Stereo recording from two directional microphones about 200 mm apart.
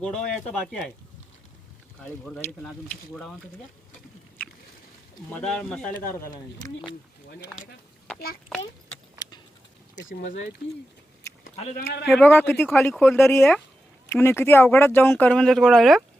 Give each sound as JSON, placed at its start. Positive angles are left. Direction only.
{"t": 0.3, "sound": "speech", "side_deg": 5}
{"t": 2.0, "sound": "speech", "side_deg": 5}
{"t": 5.3, "sound": "speech", "side_deg": 5}
{"t": 6.2, "sound": "speech", "side_deg": 20}
{"t": 7.5, "sound": "speech", "side_deg": 0}
{"t": 10.1, "sound": "speech", "side_deg": 40}
{"t": 11.5, "sound": "a man's voice", "side_deg": 35}
{"t": 12.0, "sound": "speech", "side_deg": 5}
{"t": 12.9, "sound": "speech", "side_deg": 0}
{"t": 13.1, "sound": "speech", "side_deg": 10}